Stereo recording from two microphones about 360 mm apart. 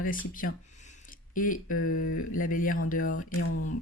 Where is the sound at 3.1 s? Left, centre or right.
Left.